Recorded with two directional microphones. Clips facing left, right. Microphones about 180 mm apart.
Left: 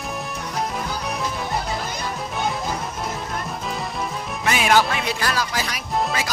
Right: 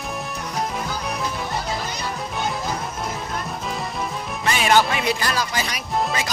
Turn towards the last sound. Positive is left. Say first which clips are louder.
# even
turn(degrees=0)  # may be behind; listen again after turning